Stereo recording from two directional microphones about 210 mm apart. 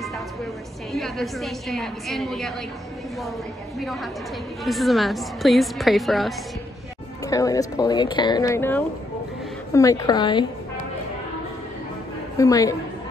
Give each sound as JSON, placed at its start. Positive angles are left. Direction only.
{"t": 0.9, "sound": "a woman's voice", "side_deg": 0}
{"t": 3.8, "sound": "a woman's voice", "side_deg": 0}
{"t": 7.2, "sound": "speech", "side_deg": 15}
{"t": 12.4, "sound": "speech", "side_deg": 15}